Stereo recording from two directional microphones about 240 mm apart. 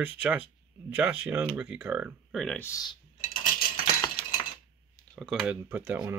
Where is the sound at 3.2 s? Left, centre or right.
Left.